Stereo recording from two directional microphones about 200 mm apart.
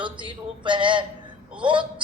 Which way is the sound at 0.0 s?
25° right (ahead or behind).